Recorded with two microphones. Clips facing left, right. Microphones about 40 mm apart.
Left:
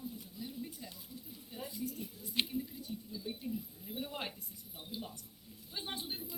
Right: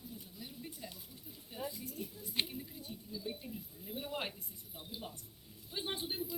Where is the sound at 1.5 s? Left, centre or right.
Centre.